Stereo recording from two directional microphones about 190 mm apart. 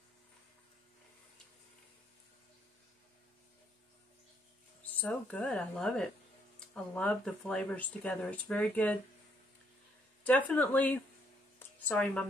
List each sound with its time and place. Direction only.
4.8 s speech: 5° left (ahead or behind)
10.2 s speech: 10° left (ahead or behind)